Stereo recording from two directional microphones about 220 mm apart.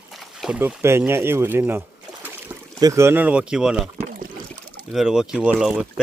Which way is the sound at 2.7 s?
15° right (ahead or behind).